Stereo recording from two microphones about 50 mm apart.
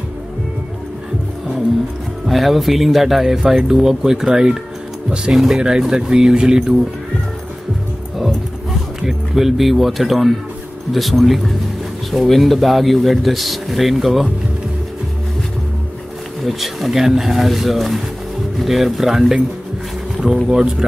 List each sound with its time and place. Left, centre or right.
2.2 s speech: centre
5.3 s speech: centre
9.0 s speech: centre
16.4 s speech: centre
20.4 s speech: centre